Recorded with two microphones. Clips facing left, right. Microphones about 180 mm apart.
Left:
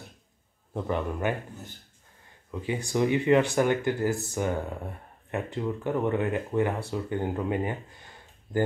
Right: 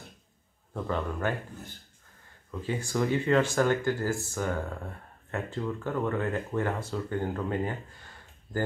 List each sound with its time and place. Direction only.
0.7 s speech: 15° left (ahead or behind)
2.6 s speech: 15° left (ahead or behind)